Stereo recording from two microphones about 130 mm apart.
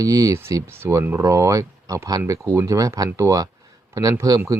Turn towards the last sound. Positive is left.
turn(degrees=-25)  # may be behind; listen again after turning